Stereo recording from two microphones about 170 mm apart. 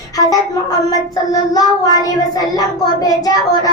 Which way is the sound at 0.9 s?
20° left (ahead or behind).